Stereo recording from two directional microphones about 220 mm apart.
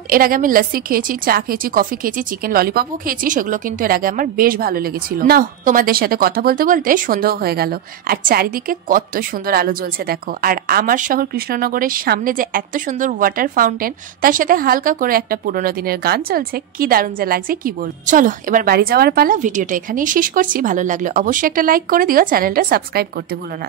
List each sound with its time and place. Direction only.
0.1 s a woman's voice: 40° right (ahead or behind)